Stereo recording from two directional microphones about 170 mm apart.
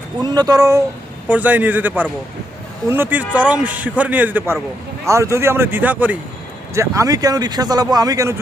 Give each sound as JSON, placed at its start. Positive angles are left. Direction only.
{"t": 0.2, "sound": "speech", "side_deg": -25}
{"t": 1.3, "sound": "a man's voice", "side_deg": -10}